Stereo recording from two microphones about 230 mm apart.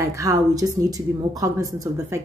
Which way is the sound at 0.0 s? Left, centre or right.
Centre.